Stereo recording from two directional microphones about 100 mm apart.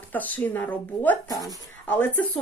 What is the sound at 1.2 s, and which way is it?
Speech, 35° left (ahead or behind).